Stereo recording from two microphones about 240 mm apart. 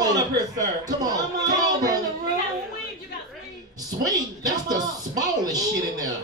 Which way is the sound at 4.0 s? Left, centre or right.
Centre.